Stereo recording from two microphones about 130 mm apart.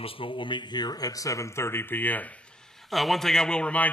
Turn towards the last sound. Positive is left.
turn(degrees=10)  # may be behind; listen again after turning